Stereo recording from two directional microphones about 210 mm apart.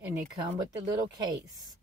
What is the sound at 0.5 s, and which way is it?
Speech, 20° right (ahead or behind).